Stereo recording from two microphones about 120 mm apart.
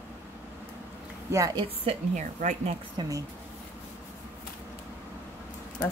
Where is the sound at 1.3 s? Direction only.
30° right (ahead or behind).